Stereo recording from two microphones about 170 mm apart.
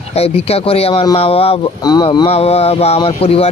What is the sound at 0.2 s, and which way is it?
Speech, 35° left (ahead or behind).